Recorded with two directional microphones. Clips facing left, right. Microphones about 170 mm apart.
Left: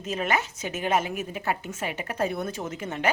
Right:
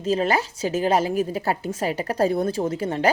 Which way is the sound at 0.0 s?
30° right (ahead or behind).